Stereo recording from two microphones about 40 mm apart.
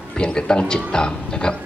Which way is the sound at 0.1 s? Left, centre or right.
Left.